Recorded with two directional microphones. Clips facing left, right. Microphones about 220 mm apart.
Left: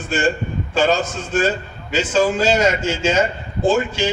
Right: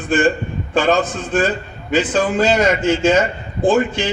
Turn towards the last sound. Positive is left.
turn(degrees=-55)  # may be behind; listen again after turning